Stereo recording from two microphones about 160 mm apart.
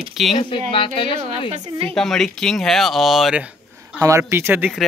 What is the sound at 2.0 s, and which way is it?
Speech, centre (ahead or behind).